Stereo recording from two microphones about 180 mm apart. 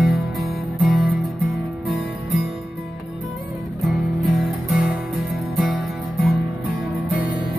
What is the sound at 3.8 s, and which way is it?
Music, centre (ahead or behind).